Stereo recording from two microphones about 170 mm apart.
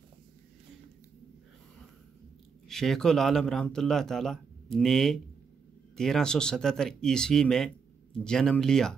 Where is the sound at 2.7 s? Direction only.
Centre (ahead or behind).